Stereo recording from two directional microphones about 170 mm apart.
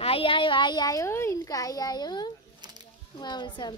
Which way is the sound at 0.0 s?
35° left (ahead or behind).